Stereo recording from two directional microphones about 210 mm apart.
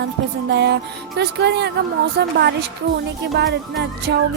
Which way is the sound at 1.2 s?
55° right (ahead or behind).